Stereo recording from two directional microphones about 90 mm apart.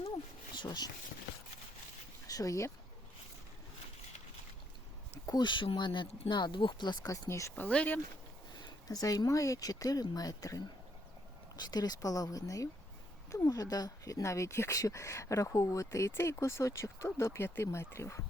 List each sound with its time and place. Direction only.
0.5 s speech: 55° left (ahead or behind)
2.2 s speech: 40° left (ahead or behind)
5.2 s speech: 50° left (ahead or behind)
7.3 s speech: 35° left (ahead or behind)
7.5 s speech: 15° left (ahead or behind)
8.9 s speech: 45° left (ahead or behind)
11.6 s speech: 45° left (ahead or behind); by 18.2 s 30° left (ahead or behind)